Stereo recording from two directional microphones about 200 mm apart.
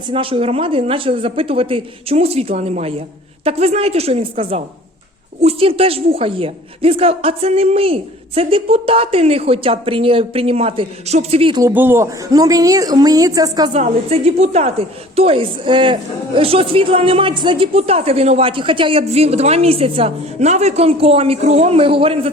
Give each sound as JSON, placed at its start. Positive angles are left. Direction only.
{"t": 0.1, "sound": "a woman's voice", "side_deg": -25}
{"t": 11.6, "sound": "a woman's voice", "side_deg": -10}
{"t": 13.7, "sound": "a woman's voice", "side_deg": -30}